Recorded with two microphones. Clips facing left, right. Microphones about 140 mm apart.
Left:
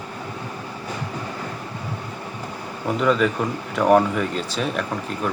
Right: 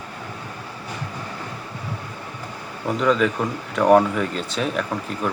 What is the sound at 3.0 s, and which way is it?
Speech, centre (ahead or behind).